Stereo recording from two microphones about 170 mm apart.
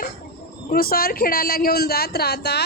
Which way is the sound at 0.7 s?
60° left (ahead or behind).